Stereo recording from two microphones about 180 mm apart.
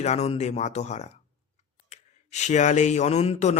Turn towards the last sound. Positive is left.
turn(degrees=35)  # may be behind; listen again after turning